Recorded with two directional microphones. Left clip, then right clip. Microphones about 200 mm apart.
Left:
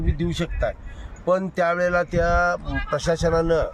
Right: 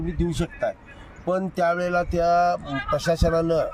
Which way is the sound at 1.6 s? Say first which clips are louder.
Left 2 dB; 25° left (ahead or behind).